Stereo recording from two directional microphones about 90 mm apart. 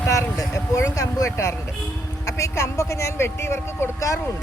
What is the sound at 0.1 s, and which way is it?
Speech, 40° left (ahead or behind).